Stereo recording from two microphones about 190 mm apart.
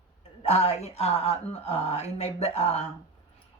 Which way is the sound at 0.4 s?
35° left (ahead or behind).